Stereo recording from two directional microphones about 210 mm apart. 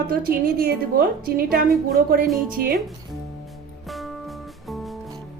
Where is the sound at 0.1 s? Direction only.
45° right (ahead or behind).